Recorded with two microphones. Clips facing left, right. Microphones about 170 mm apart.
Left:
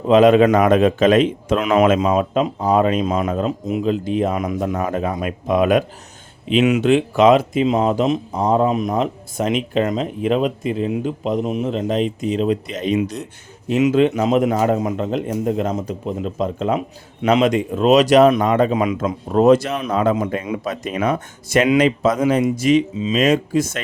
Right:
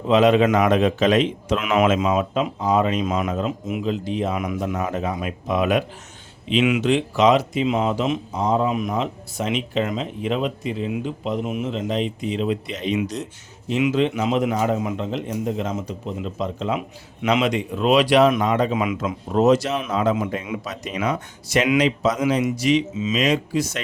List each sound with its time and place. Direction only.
0.1 s speech: 50° left (ahead or behind)
1.5 s speech: 35° left (ahead or behind)
2.6 s speech: 50° left (ahead or behind)
3.0 s speech: 35° left (ahead or behind)
6.8 s speech: 55° left (ahead or behind)
18.4 s speech: 50° left (ahead or behind)
19.0 s a man's voice: 50° left (ahead or behind)